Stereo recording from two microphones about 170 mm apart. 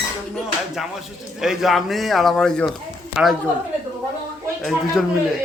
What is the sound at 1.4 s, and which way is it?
A man's voice, centre (ahead or behind).